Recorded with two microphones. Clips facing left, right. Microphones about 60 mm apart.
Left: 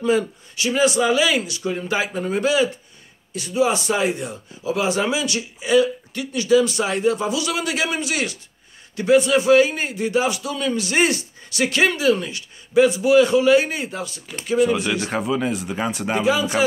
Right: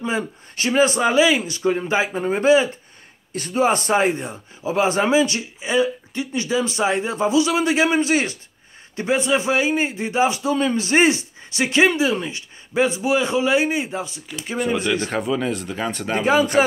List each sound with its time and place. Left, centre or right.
0.6 s a man's voice: right
3.3 s a man's voice: right; by 14.2 s centre
15.0 s speech: centre
16.3 s a man's voice: right